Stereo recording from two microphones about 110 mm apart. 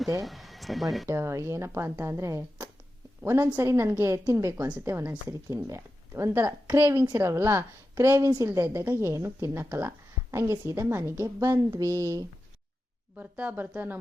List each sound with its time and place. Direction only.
0.2 s speech: centre (ahead or behind)
1.0 s a woman's voice: 25° right (ahead or behind)
13.1 s speech: 15° right (ahead or behind)